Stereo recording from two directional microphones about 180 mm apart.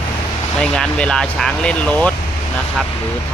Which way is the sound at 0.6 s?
5° left (ahead or behind).